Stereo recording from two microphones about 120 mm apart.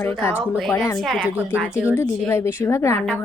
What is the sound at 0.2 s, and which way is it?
Speech, 15° left (ahead or behind).